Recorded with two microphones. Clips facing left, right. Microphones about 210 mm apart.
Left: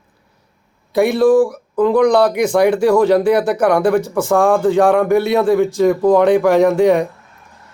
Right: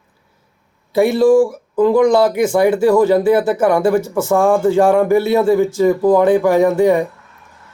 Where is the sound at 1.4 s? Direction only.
5° right (ahead or behind).